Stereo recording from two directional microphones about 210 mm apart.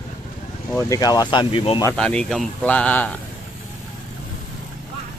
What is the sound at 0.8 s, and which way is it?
Speech, 15° left (ahead or behind).